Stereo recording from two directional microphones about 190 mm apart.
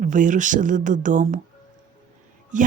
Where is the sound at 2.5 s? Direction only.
40° right (ahead or behind).